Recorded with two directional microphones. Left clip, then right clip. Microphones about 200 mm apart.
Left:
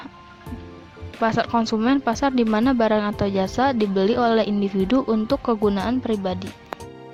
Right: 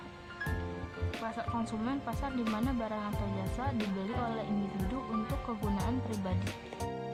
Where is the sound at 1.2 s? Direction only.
45° left (ahead or behind).